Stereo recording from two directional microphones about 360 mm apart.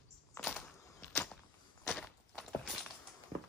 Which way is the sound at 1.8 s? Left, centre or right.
Centre.